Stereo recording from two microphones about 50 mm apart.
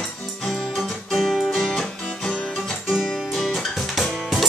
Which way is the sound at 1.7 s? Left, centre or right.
Centre.